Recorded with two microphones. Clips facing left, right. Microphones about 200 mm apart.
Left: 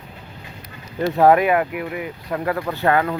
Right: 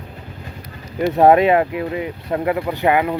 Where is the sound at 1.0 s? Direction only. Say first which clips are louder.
Right 2 dB; 20° right (ahead or behind).